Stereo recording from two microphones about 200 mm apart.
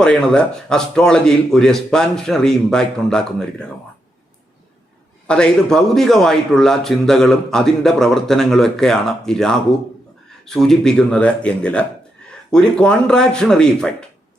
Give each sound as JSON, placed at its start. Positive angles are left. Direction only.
{"t": 0.0, "sound": "a man's voice", "side_deg": 5}
{"t": 5.3, "sound": "a man's voice", "side_deg": 5}